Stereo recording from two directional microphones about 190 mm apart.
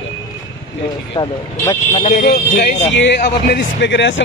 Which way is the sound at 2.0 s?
55° left (ahead or behind).